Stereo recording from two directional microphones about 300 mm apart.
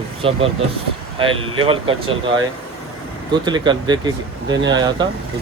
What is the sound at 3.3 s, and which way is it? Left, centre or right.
Speech, centre.